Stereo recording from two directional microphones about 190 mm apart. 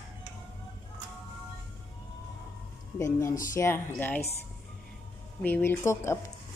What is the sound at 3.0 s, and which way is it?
A woman's voice, 15° left (ahead or behind).